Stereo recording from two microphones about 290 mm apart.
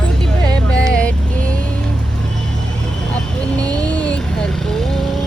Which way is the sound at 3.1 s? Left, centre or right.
Centre.